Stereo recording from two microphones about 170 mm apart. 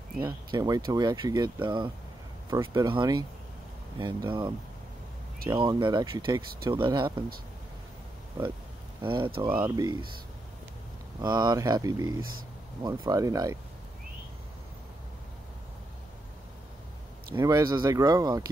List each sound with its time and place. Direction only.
0.2 s speech: 25° right (ahead or behind)
2.5 s speech: 25° right (ahead or behind)
9.0 s speech: 30° right (ahead or behind)
11.1 s speech: 25° right (ahead or behind)
17.3 s speech: 20° right (ahead or behind)